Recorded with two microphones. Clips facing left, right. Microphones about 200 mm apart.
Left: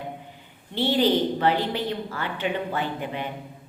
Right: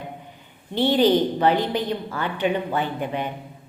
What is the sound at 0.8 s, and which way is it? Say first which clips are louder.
A woman's voice: right 3 dB; 15° right (ahead or behind).